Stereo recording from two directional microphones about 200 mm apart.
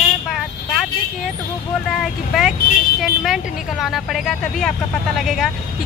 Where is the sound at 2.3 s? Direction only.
Centre (ahead or behind).